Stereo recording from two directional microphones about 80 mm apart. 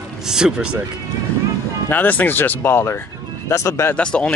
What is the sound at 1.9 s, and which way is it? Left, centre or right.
Speech, left.